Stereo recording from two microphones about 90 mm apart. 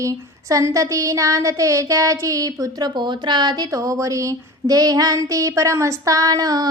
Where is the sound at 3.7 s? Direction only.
40° right (ahead or behind).